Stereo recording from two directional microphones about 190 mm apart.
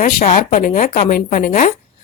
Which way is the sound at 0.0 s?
40° left (ahead or behind).